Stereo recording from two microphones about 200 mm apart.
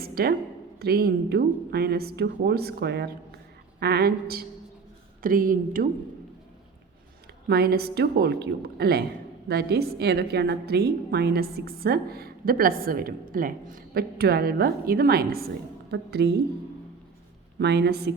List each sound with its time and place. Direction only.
0.0 s a sound: 50° right (ahead or behind)
0.8 s a woman's voice: 50° right (ahead or behind)
7.4 s a woman's voice: 50° right (ahead or behind)
17.6 s a woman's voice: 60° right (ahead or behind)